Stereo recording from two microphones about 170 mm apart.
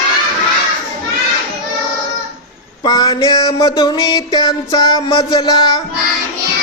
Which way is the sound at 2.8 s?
25° left (ahead or behind).